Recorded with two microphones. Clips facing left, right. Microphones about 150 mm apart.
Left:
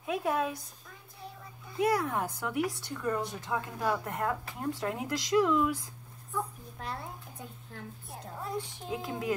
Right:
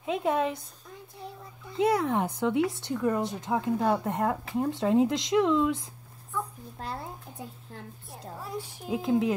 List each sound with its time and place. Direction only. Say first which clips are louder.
0.0 s speech: right 4 dB; 20° right (ahead or behind)
1.7 s speech: right 4 dB; 25° right (ahead or behind)
8.1 s a child's voice: even; 5° right (ahead or behind)
8.9 s speech: right 10 dB; 20° right (ahead or behind)